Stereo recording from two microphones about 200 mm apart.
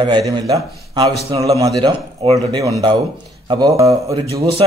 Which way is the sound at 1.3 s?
15° right (ahead or behind).